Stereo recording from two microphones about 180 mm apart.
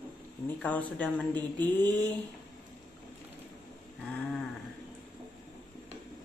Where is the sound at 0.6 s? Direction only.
10° left (ahead or behind).